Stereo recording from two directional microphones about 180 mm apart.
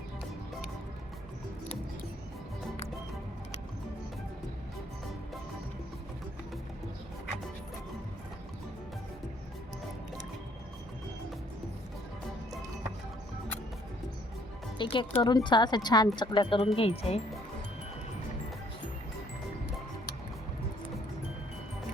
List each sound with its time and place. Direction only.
14.8 s speech: 25° left (ahead or behind)